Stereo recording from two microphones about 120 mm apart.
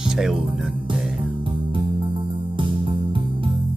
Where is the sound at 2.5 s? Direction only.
45° right (ahead or behind).